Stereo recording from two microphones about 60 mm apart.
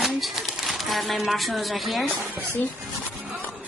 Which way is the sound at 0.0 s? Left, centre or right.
Centre.